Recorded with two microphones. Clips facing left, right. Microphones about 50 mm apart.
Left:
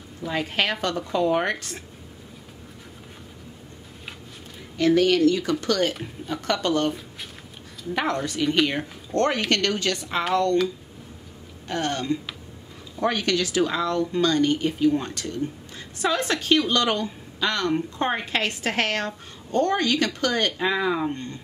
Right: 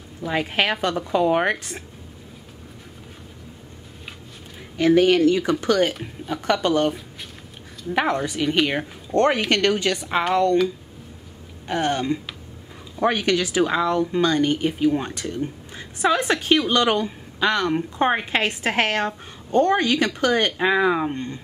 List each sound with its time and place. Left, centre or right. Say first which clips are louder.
0.3 s a woman's voice: right 3 dB; centre
4.7 s a woman's voice: right 3 dB; right
11.6 s a woman's voice: right 4 dB; centre